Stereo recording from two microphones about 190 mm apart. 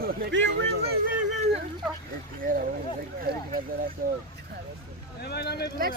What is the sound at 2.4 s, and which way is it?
Speech, 50° right (ahead or behind).